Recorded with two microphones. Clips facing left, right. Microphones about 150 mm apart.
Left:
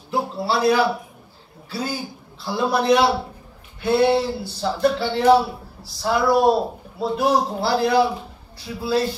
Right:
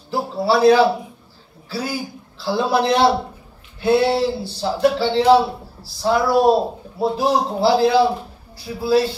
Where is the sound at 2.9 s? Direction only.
25° right (ahead or behind).